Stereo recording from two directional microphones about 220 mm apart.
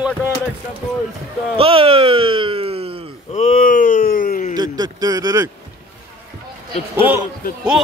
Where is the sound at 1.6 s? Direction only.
25° right (ahead or behind).